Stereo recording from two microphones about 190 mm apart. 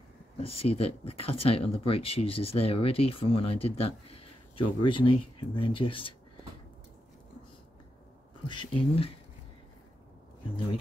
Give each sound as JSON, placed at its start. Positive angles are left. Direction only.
{"t": 0.4, "sound": "speech", "side_deg": 30}
{"t": 8.5, "sound": "speech", "side_deg": 25}